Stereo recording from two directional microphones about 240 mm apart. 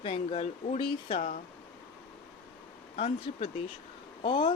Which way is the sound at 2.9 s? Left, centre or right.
Left.